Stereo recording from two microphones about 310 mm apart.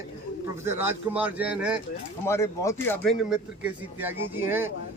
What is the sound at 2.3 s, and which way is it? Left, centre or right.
A man's voice, centre.